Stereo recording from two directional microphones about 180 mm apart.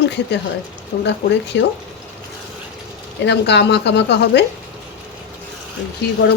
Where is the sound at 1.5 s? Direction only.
90° left.